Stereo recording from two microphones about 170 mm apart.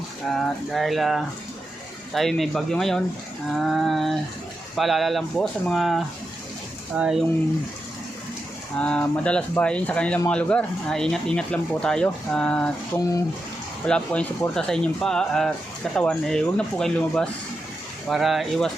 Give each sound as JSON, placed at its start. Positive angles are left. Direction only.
{"t": 0.3, "sound": "speech", "side_deg": 0}
{"t": 8.8, "sound": "speech", "side_deg": 10}
{"t": 13.0, "sound": "speech", "side_deg": 20}
{"t": 13.8, "sound": "speech", "side_deg": 5}